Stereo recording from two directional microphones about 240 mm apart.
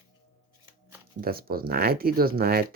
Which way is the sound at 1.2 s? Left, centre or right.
Right.